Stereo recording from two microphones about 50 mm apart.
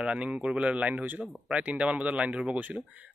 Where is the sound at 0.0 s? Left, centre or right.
Right.